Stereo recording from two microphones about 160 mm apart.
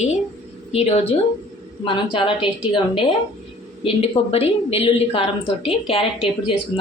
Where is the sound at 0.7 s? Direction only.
40° left (ahead or behind).